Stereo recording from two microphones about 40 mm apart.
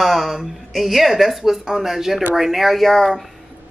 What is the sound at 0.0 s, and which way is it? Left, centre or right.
Speech, centre.